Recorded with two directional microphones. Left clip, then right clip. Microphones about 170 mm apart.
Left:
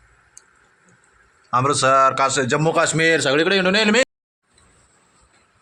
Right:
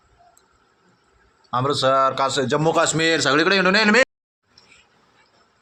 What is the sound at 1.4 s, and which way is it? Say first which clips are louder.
Speech: left 3 dB; 15° left (ahead or behind).